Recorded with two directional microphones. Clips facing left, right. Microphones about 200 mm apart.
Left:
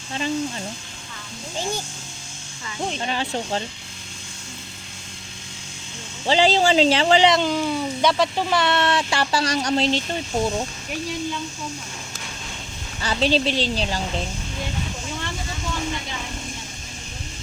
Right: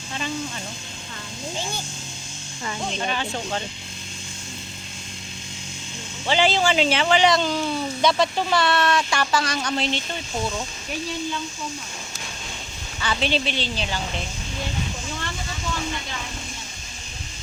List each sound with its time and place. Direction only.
3.1 s speech: 30° left (ahead or behind)
6.2 s speech: 35° left (ahead or behind)
7.3 s speech: 15° left (ahead or behind); by 10.0 s 35° left (ahead or behind)
13.0 s speech: 35° left (ahead or behind)